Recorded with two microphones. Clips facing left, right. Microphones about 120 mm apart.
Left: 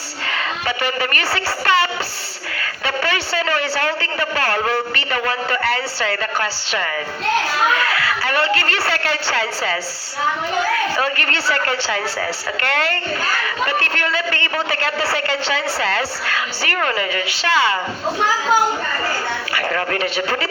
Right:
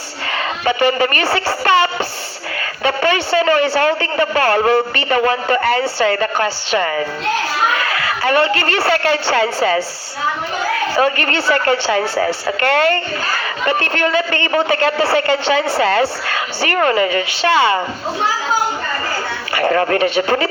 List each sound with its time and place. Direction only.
0.6 s a woman's voice: 25° right (ahead or behind)
10.9 s speech: 25° right (ahead or behind)
19.5 s a woman's voice: 30° right (ahead or behind)